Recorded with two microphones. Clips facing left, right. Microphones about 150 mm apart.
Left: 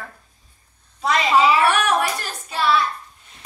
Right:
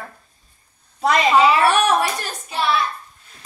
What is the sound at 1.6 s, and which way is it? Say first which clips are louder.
A child's voice: right 2 dB; 20° right (ahead or behind).